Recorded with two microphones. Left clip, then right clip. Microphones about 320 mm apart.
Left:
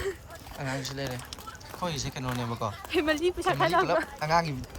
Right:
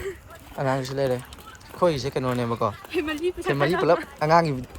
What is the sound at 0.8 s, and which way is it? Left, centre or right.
Speech, centre.